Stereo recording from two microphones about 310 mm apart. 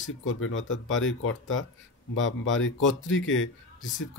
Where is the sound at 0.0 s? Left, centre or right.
Left.